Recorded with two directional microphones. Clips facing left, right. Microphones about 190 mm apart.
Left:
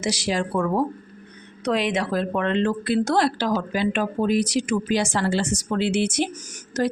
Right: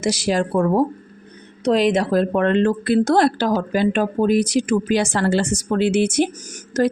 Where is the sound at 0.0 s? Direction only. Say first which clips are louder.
Right 5 dB; 50° right (ahead or behind).